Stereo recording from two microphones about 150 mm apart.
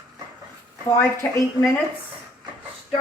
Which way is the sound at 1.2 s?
15° left (ahead or behind).